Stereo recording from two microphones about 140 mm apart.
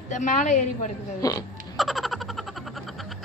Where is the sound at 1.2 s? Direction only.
25° left (ahead or behind).